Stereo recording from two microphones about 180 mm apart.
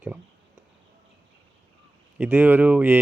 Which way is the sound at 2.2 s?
10° right (ahead or behind).